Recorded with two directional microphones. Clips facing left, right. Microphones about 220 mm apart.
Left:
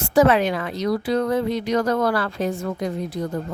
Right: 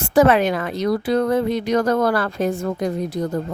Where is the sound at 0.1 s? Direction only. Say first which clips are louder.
Right 2 dB; 55° right (ahead or behind).